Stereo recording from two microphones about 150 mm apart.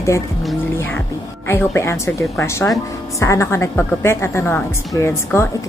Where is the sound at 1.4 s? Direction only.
20° left (ahead or behind).